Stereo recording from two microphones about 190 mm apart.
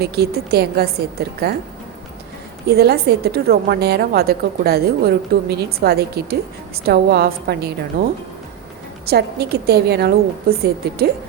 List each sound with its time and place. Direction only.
0.0 s a woman's voice: 55° right (ahead or behind)
2.6 s a woman's voice: 55° right (ahead or behind)
9.0 s a woman's voice: 55° right (ahead or behind)